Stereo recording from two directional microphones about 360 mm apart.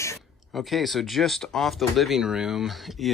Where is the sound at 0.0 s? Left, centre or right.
Centre.